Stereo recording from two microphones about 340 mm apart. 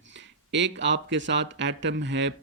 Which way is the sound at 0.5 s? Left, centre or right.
Right.